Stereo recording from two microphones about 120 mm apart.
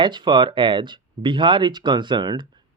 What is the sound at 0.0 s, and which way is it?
Speech, 40° right (ahead or behind).